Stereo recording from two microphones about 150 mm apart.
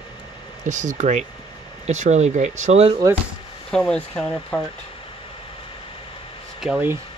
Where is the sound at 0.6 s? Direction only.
55° right (ahead or behind).